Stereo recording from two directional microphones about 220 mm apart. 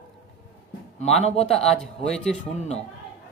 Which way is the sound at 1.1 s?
Centre (ahead or behind).